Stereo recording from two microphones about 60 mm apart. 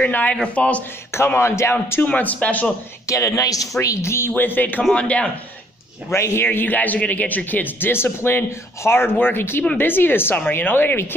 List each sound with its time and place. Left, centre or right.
0.0 s speech: left
1.1 s a man's voice: left
2.0 s speech: left
3.1 s a man's voice: left
3.8 s a man's voice: left
4.3 s speech: left
4.9 s speech: centre
6.1 s a man's voice: left